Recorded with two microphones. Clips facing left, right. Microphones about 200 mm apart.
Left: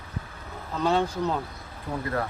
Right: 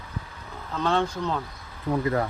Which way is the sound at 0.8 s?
10° left (ahead or behind).